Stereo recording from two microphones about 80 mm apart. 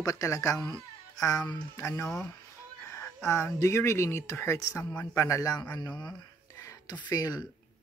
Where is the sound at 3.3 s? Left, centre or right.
Left.